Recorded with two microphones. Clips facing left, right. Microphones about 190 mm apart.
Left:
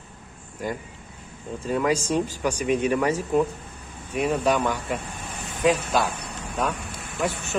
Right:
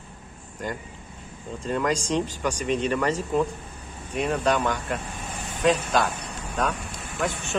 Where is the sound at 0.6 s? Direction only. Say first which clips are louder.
Left 2 dB; 10° left (ahead or behind).